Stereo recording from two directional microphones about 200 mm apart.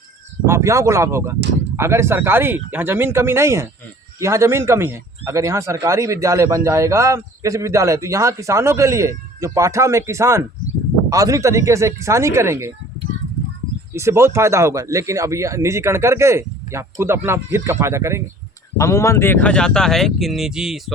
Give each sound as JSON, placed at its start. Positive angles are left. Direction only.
{"t": 0.4, "sound": "speech", "side_deg": -15}
{"t": 13.9, "sound": "speech", "side_deg": -15}
{"t": 18.8, "sound": "speech", "side_deg": 15}